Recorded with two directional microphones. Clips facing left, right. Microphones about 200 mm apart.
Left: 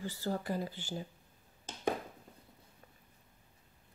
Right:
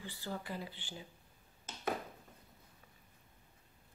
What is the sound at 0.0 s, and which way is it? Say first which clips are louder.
Speech: left 7 dB; 40° left (ahead or behind).